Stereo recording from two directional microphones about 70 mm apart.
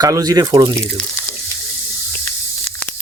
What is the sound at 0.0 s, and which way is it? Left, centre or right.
Speech, right.